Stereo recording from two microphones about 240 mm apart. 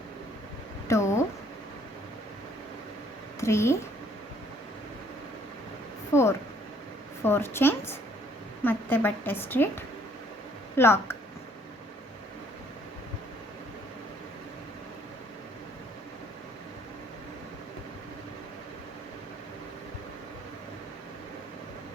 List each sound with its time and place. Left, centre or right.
0.9 s a sound: centre
3.4 s a woman's voice: centre
6.1 s a woman's voice: centre